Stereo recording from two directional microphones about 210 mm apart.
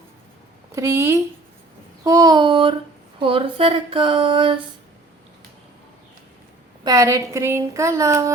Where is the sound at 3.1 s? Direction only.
25° right (ahead or behind).